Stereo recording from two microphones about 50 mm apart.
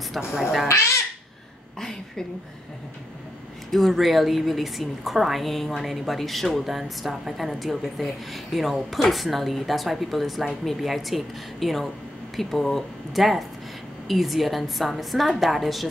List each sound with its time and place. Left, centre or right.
0.3 s a woman's voice: centre
0.7 s speech: left
1.8 s a sound: centre
3.7 s a woman's voice: centre